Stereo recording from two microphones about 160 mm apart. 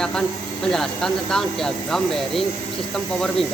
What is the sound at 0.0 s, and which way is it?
Speech, 5° left (ahead or behind).